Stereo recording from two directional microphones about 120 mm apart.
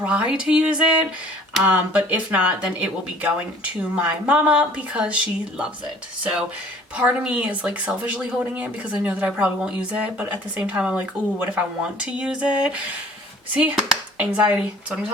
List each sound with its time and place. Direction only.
0.0 s speech: 10° right (ahead or behind)
6.9 s speech: 10° right (ahead or behind)